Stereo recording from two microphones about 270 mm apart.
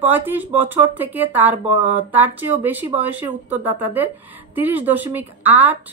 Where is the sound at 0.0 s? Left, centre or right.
Centre.